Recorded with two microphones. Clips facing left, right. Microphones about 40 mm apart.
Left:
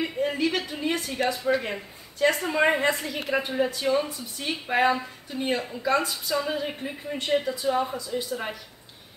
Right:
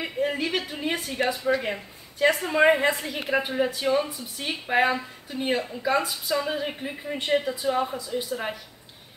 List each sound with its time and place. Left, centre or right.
0.0 s a woman's voice: centre